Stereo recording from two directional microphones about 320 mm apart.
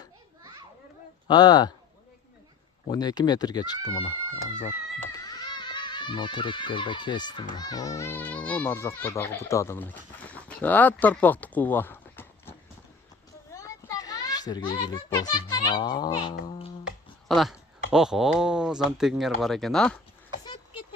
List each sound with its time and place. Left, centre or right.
1.3 s speech: centre
2.8 s a child's voice: centre
16.3 s music: centre
16.8 s speech: centre
20.4 s a sound: centre